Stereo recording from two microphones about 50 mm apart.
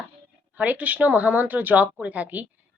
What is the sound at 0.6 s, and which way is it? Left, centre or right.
A woman's voice, right.